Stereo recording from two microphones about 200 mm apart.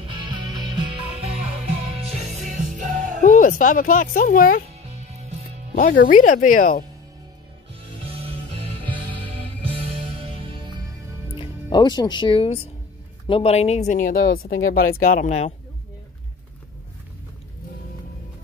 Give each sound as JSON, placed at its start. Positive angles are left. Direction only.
{"t": 0.0, "sound": "music", "side_deg": -20}
{"t": 2.0, "sound": "music", "side_deg": -30}
{"t": 3.2, "sound": "speech", "side_deg": 40}
{"t": 5.8, "sound": "speech", "side_deg": 40}
{"t": 8.0, "sound": "music", "side_deg": -30}
{"t": 11.3, "sound": "speech", "side_deg": 20}